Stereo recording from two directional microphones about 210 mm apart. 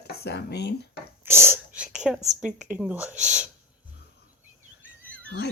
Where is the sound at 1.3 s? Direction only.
10° right (ahead or behind).